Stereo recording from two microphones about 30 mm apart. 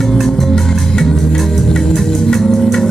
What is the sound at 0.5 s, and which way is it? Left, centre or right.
Music, centre.